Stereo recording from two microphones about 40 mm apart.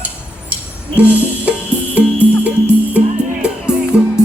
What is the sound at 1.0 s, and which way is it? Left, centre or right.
Music, right.